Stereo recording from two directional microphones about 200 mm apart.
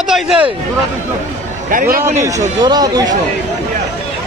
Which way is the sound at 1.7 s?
45° right (ahead or behind).